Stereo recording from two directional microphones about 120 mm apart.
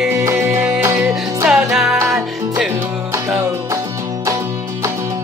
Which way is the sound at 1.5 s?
5° right (ahead or behind).